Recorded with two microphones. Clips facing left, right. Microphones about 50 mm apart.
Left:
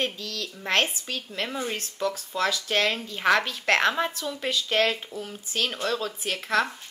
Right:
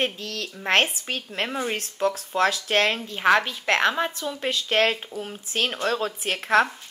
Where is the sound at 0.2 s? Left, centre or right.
Right.